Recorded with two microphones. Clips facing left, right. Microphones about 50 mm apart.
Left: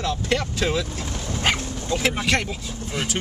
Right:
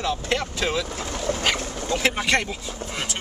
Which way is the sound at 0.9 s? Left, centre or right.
Right.